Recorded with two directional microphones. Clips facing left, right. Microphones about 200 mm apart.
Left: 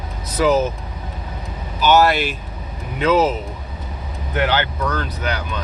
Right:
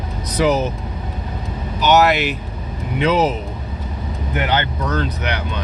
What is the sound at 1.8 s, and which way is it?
Speech, 20° right (ahead or behind).